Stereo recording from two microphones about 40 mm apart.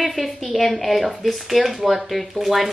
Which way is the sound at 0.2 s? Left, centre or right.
Centre.